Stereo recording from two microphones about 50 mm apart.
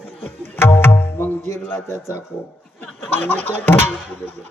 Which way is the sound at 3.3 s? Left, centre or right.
Left.